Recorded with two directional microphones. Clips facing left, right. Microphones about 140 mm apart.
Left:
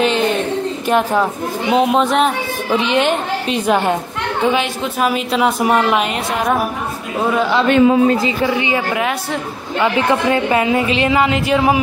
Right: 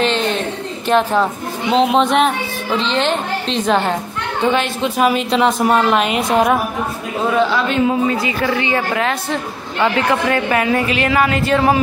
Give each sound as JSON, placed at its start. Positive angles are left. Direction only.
{"t": 0.8, "sound": "a woman's voice", "side_deg": 10}
{"t": 2.8, "sound": "a woman's voice", "side_deg": 10}
{"t": 7.6, "sound": "speech", "side_deg": 55}
{"t": 8.2, "sound": "a woman's voice", "side_deg": 20}
{"t": 10.2, "sound": "speech", "side_deg": 20}